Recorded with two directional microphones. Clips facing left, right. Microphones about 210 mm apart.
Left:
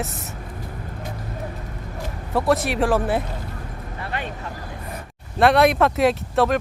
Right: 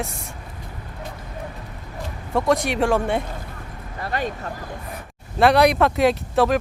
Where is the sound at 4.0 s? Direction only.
40° right (ahead or behind).